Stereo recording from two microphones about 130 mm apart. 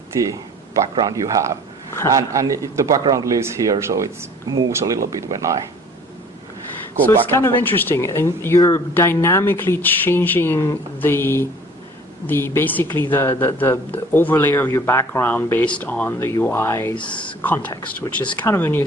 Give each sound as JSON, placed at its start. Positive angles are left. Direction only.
{"t": 0.1, "sound": "speech", "side_deg": -25}
{"t": 7.3, "sound": "speech", "side_deg": 15}
{"t": 17.7, "sound": "speech", "side_deg": 30}
{"t": 18.3, "sound": "speech", "side_deg": 15}